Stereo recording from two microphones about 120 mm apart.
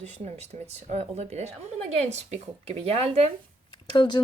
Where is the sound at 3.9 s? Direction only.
40° left (ahead or behind).